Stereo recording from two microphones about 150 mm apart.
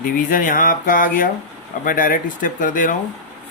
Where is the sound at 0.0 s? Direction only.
65° left (ahead or behind).